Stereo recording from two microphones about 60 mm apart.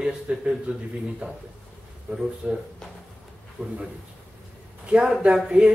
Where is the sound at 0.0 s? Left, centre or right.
Centre.